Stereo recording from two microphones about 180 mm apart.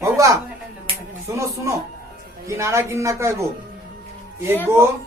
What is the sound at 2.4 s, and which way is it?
A woman's voice, 15° right (ahead or behind).